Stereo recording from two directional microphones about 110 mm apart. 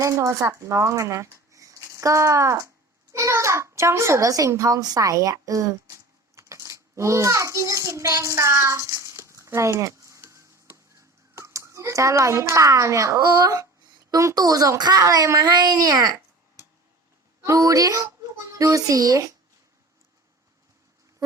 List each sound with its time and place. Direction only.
0.0 s a child's voice: 30° right (ahead or behind)
6.3 s a sound: 25° right (ahead or behind)
14.1 s a child's voice: 35° right (ahead or behind)
17.4 s a child's voice: 30° right (ahead or behind)